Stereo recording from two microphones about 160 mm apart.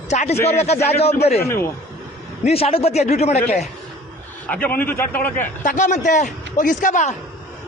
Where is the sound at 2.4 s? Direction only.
40° left (ahead or behind).